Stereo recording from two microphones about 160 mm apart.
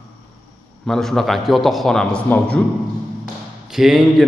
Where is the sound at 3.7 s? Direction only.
Centre (ahead or behind).